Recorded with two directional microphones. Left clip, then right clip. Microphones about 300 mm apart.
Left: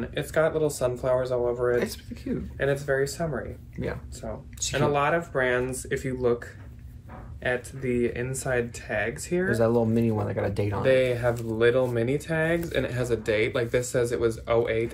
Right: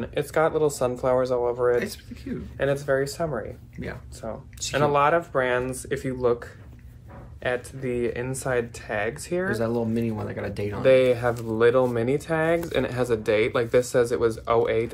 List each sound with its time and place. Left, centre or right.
0.0 s speech: centre
1.8 s speech: centre
2.5 s speech: centre
3.7 s speech: centre
4.2 s speech: centre
9.5 s speech: centre
10.8 s speech: centre